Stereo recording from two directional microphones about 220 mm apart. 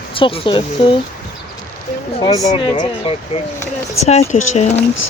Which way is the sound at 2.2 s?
15° left (ahead or behind).